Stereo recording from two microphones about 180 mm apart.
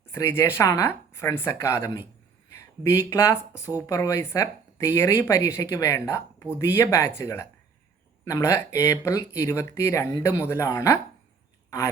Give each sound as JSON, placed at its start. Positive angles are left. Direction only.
{"t": 0.1, "sound": "speech", "side_deg": 15}